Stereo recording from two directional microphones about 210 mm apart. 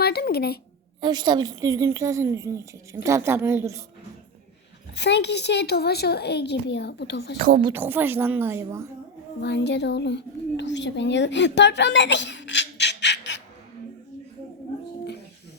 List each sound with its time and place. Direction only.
0.0 s a sound: 45° left (ahead or behind)
1.0 s a woman's voice: 20° right (ahead or behind)
4.9 s a child's voice: 55° left (ahead or behind)
7.3 s speech: 40° right (ahead or behind)
7.7 s a woman's voice: 10° right (ahead or behind)
9.4 s a child's voice: 55° left (ahead or behind)